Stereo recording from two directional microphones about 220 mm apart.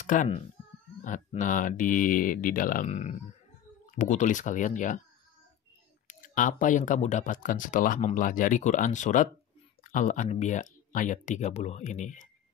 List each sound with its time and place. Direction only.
0.0 s speech: 35° left (ahead or behind)
6.0 s speech: 35° left (ahead or behind)